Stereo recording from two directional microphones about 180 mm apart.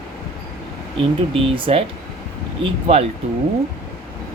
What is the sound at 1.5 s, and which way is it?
Speech, 30° right (ahead or behind).